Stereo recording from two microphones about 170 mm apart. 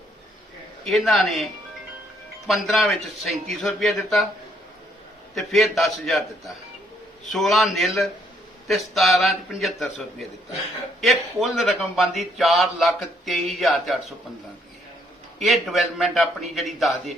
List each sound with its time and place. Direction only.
0.9 s a man's voice: centre (ahead or behind)
2.5 s a man's voice: centre (ahead or behind)
5.3 s a man's voice: centre (ahead or behind)
15.4 s a man's voice: centre (ahead or behind)